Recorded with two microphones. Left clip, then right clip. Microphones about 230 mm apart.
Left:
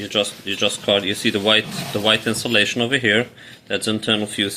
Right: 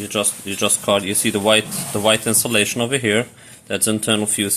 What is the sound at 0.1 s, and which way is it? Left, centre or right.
Speech, right.